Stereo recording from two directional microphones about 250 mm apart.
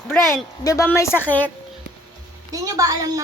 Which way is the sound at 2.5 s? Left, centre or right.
Centre.